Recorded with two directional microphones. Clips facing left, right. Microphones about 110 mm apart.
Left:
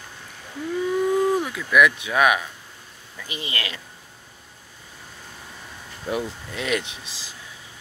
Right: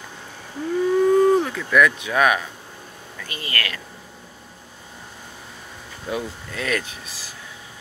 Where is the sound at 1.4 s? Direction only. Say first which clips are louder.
Right 1 dB; 5° left (ahead or behind).